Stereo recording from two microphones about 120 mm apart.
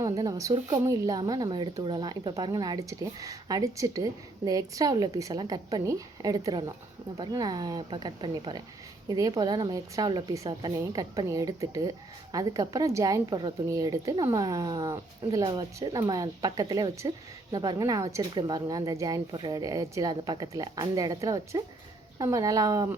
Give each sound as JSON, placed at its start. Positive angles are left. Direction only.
{"t": 0.0, "sound": "speech", "side_deg": -30}
{"t": 10.3, "sound": "a woman's voice", "side_deg": -25}
{"t": 15.4, "sound": "speech", "side_deg": -45}
{"t": 15.9, "sound": "a woman's voice", "side_deg": -35}